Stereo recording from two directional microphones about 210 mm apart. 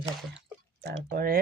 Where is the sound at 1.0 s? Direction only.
45° right (ahead or behind).